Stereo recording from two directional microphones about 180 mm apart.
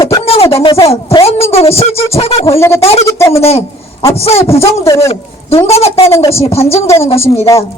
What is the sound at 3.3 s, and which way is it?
Speech, 35° left (ahead or behind).